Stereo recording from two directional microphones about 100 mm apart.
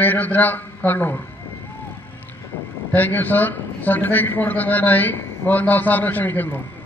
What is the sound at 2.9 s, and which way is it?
A man's voice, 20° left (ahead or behind).